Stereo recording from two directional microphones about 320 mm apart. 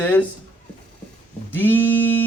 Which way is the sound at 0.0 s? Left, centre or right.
Centre.